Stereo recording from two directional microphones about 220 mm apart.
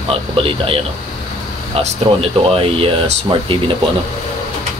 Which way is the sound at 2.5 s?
25° right (ahead or behind).